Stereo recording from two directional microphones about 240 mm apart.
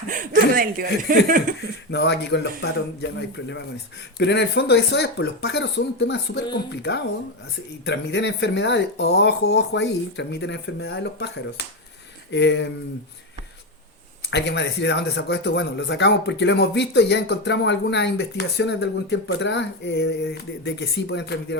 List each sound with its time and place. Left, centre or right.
0.1 s speech: right
1.9 s a man's voice: left
7.9 s a man's voice: left
14.3 s a man's voice: left